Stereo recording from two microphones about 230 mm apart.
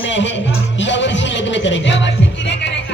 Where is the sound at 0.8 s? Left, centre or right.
Left.